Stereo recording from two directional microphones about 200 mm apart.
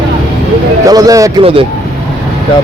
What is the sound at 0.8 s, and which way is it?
Speech, 15° right (ahead or behind).